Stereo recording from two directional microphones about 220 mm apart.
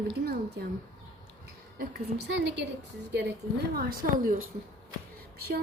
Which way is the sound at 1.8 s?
50° right (ahead or behind).